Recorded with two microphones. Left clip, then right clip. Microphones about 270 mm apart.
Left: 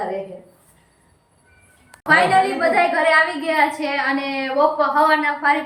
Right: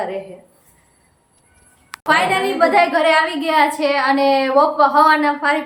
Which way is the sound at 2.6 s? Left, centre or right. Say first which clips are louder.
Right 3 dB; centre.